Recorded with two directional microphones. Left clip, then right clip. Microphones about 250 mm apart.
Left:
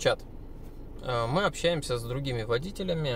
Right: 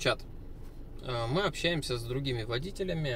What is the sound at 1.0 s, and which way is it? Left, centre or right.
Speech, centre.